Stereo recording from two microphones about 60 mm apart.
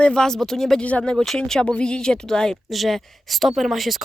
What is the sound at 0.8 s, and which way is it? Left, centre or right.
Speech, left.